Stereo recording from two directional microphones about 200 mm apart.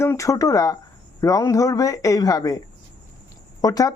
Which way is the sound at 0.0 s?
15° left (ahead or behind).